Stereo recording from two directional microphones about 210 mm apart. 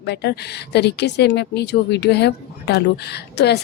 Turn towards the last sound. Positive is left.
turn(degrees=50)  # may be behind; listen again after turning